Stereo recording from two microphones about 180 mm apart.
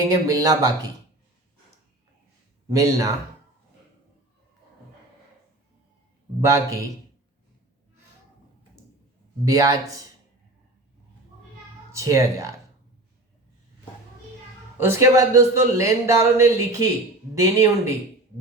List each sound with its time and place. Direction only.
0.1 s speech: 20° right (ahead or behind)
2.6 s speech: 20° right (ahead or behind)
6.4 s a man's voice: 20° right (ahead or behind)
9.4 s speech: 20° right (ahead or behind)
11.9 s speech: 15° right (ahead or behind)
14.8 s a man's voice: 15° right (ahead or behind)